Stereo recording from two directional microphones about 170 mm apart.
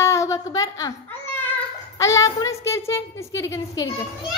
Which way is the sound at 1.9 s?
20° left (ahead or behind).